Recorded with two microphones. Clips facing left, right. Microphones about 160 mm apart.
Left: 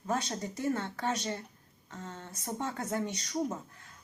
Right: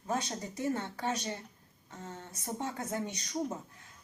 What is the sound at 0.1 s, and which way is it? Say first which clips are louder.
Speech: left 2 dB; 15° right (ahead or behind).